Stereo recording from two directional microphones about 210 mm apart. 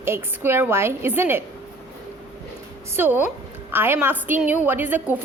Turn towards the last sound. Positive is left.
turn(degrees=-10)  # may be behind; listen again after turning